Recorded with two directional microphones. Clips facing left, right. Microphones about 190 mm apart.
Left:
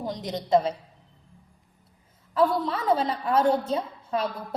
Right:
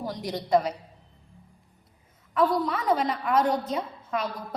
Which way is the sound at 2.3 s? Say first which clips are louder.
Left 1 dB; 30° left (ahead or behind).